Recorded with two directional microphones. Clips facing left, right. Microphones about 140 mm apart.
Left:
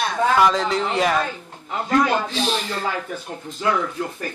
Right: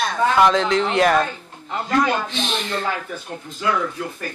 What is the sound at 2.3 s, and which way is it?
Speech, 40° left (ahead or behind).